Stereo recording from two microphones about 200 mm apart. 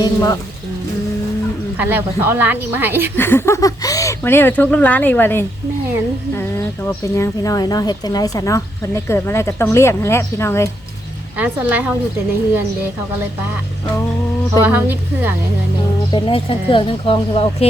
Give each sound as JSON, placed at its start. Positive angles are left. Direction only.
{"t": 0.0, "sound": "speech", "side_deg": 15}
{"t": 1.8, "sound": "speech", "side_deg": -10}
{"t": 3.2, "sound": "speech", "side_deg": 10}
{"t": 6.8, "sound": "speech", "side_deg": 15}
{"t": 11.3, "sound": "speech", "side_deg": -10}
{"t": 14.6, "sound": "speech", "side_deg": -10}
{"t": 16.1, "sound": "speech", "side_deg": 25}